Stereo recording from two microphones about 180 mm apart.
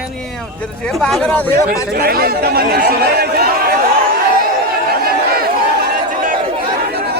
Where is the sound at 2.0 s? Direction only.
60° right (ahead or behind).